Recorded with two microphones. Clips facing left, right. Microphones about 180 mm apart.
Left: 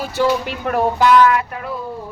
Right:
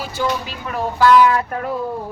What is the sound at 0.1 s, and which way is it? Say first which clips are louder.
Speech: left 6 dB; 65° left (ahead or behind).